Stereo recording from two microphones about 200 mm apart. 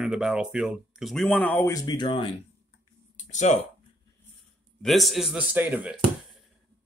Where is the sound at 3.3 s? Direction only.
35° left (ahead or behind).